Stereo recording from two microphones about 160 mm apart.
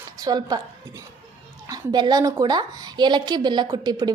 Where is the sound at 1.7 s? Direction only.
25° right (ahead or behind).